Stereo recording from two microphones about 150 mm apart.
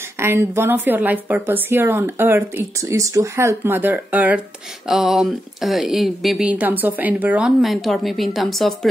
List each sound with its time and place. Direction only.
0.2 s a woman's voice: 15° right (ahead or behind); by 8.7 s centre (ahead or behind)